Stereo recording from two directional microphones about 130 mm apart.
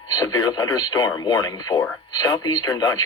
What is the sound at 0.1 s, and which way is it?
Speech, 30° left (ahead or behind).